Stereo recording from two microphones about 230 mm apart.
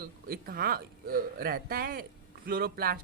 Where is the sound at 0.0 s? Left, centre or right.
Right.